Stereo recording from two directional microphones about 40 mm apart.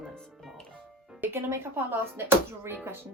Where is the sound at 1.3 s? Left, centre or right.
Right.